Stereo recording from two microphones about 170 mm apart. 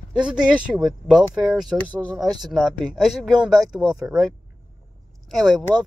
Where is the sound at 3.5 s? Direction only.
20° right (ahead or behind).